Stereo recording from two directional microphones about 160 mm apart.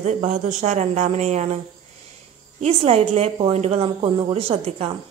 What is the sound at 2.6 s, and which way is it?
A woman's voice, 40° right (ahead or behind).